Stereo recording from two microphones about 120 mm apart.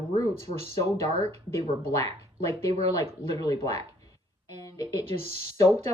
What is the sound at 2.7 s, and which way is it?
Speech, 60° right (ahead or behind).